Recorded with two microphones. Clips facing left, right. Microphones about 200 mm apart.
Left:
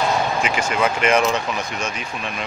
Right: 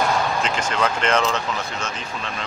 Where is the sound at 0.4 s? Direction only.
10° left (ahead or behind).